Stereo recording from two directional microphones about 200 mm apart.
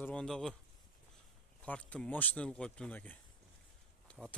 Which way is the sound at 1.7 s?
5° left (ahead or behind).